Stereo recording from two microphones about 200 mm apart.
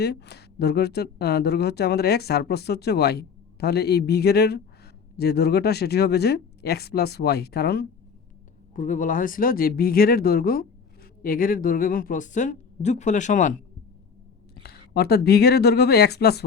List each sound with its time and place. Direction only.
0.0 s speech: 55° left (ahead or behind)
8.7 s speech: 40° left (ahead or behind)
14.5 s speech: 55° left (ahead or behind)